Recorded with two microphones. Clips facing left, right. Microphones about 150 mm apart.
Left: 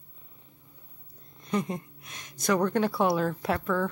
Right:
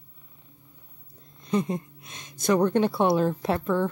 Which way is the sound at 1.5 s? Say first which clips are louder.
Right 4 dB; 25° right (ahead or behind).